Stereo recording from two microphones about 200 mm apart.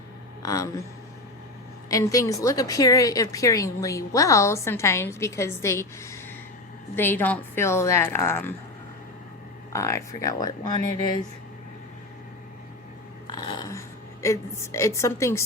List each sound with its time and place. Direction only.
0.4 s a woman's voice: 15° left (ahead or behind)
1.9 s a woman's voice: 15° left (ahead or behind)
9.7 s a woman's voice: 15° left (ahead or behind)
13.3 s a sound: 20° left (ahead or behind)